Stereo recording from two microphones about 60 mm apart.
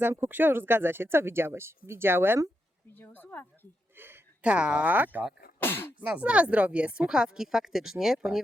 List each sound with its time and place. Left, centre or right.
0.0 s speech: right
2.9 s speech: left
3.9 s a sound: right
4.4 s speech: centre
4.9 s speech: right
5.5 s speech: left
6.0 s speech: right